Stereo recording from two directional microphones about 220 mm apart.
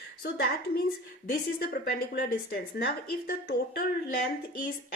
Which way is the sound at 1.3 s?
40° left (ahead or behind).